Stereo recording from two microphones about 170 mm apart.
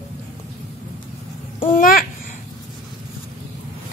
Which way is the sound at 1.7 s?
55° left (ahead or behind).